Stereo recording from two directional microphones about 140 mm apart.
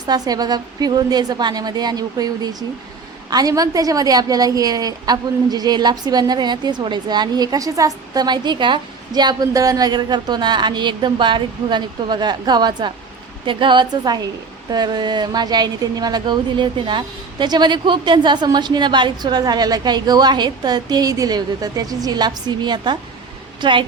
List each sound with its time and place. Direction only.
0.0 s a woman's voice: 30° right (ahead or behind)